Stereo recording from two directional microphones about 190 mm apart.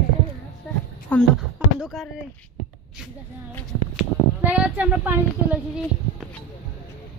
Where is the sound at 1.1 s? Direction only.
10° left (ahead or behind).